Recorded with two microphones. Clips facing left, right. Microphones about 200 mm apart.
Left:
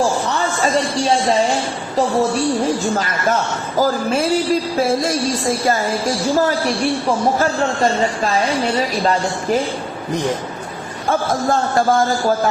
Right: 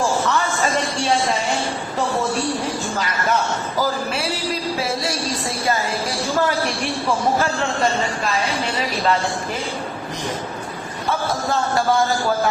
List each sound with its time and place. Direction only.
3.8 s speech: 45° left (ahead or behind)